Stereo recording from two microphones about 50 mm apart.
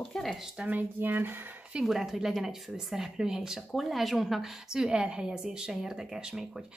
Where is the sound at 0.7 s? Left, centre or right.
Right.